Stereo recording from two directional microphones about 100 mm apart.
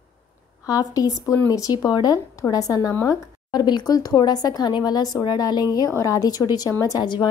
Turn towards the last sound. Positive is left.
turn(degrees=35)  # may be behind; listen again after turning